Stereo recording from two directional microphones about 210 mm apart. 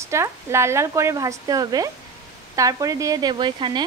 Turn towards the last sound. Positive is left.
turn(degrees=-20)  # may be behind; listen again after turning